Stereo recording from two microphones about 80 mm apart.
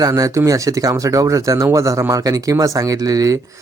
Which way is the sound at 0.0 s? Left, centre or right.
Right.